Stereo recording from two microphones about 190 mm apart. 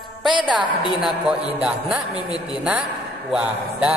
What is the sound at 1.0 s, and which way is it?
Speech, 5° right (ahead or behind).